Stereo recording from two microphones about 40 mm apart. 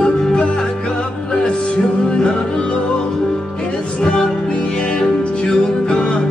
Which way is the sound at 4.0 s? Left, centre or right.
Centre.